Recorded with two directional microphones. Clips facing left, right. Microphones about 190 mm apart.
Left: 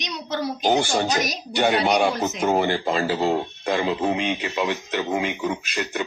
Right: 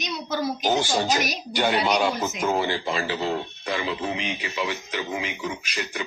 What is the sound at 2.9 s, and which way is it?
A man's voice, 40° left (ahead or behind).